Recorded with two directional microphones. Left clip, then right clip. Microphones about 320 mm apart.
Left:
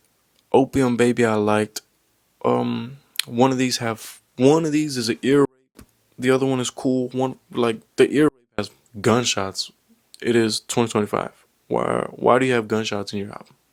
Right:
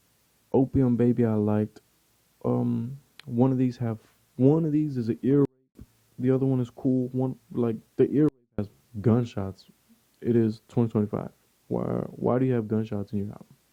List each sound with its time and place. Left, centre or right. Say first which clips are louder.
0.7 s speech: left 6 dB; centre
6.9 s speech: left 3 dB; left
7.2 s speech: left 7 dB; centre